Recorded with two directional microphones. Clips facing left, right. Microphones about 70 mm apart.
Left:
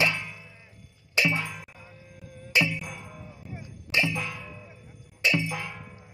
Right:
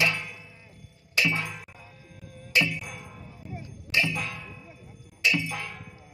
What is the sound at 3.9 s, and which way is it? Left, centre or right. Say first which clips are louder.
Ding: even; left.